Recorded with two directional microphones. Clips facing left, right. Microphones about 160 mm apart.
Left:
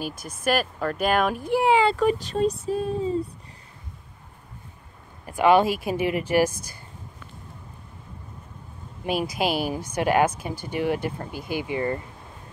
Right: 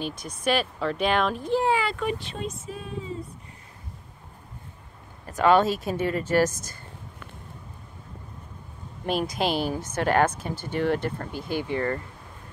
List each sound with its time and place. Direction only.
0.0 s speech: 5° left (ahead or behind)
1.9 s speech: 40° left (ahead or behind)
5.2 s speech: 10° left (ahead or behind)
9.0 s speech: 5° left (ahead or behind)